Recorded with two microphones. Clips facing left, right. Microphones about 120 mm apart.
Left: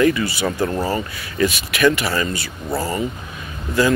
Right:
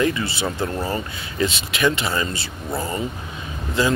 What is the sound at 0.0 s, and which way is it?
Speech, 25° right (ahead or behind).